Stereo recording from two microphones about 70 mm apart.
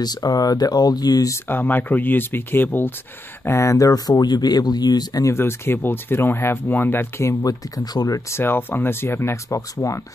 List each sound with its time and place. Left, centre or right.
0.0 s speech: left
1.5 s speech: left
3.4 s speech: left
5.2 s speech: left
7.4 s speech: left
8.3 s speech: left
9.5 s speech: left